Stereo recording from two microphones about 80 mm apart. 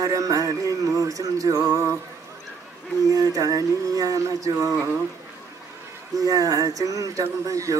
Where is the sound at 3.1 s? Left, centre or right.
Right.